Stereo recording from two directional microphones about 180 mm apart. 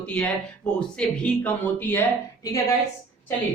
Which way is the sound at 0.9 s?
5° left (ahead or behind).